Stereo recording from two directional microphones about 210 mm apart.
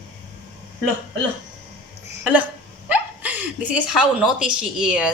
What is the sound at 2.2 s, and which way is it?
Speech, 5° right (ahead or behind).